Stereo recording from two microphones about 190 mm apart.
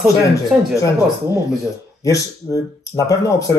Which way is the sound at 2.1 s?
15° left (ahead or behind).